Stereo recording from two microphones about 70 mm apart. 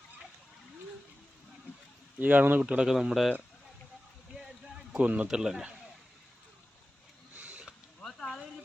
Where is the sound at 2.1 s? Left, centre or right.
Right.